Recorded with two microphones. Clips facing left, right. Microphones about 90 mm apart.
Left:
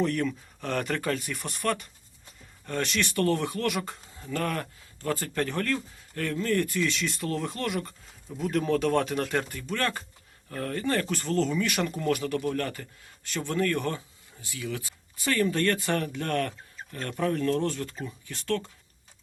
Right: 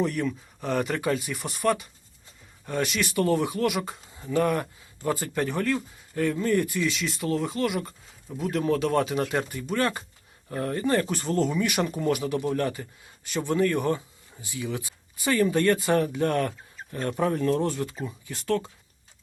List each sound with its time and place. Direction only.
0.0 s speech: 5° right (ahead or behind)